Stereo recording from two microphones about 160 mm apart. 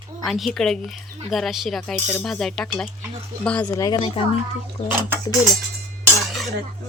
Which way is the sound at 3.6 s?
20° left (ahead or behind).